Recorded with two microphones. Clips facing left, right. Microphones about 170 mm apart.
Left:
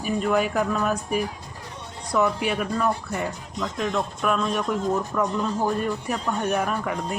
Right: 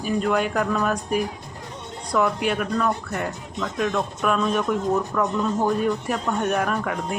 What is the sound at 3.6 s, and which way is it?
Speech, 15° left (ahead or behind).